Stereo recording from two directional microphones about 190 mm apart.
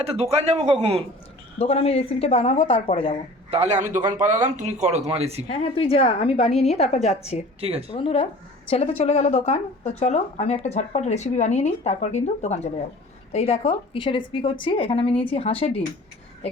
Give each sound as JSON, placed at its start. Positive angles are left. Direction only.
{"t": 0.0, "sound": "speech", "side_deg": -35}
{"t": 1.5, "sound": "speech", "side_deg": 35}
{"t": 3.5, "sound": "speech", "side_deg": -35}
{"t": 5.5, "sound": "speech", "side_deg": 30}
{"t": 7.6, "sound": "speech", "side_deg": -30}
{"t": 7.9, "sound": "a woman's voice", "side_deg": 30}